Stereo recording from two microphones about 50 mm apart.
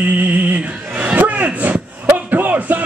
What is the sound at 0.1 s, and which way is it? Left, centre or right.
Music, right.